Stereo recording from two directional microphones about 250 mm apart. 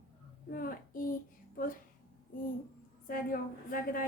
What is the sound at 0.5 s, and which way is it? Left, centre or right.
A woman's voice, left.